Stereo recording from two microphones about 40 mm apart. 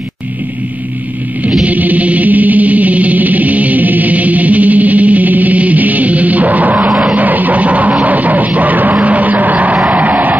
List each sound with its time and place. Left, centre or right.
1.6 s music: right
6.9 s vehicle: centre
7.2 s music: right
9.0 s a sound: right
9.8 s vehicle: right